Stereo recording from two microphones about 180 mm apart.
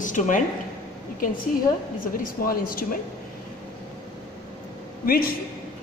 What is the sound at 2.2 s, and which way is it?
Speech, 55° left (ahead or behind).